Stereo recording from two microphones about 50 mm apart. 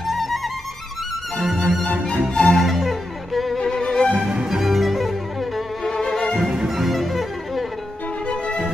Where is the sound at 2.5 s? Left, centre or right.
Centre.